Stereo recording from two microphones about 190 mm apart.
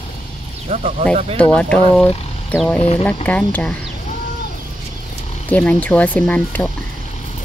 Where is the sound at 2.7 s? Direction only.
30° left (ahead or behind).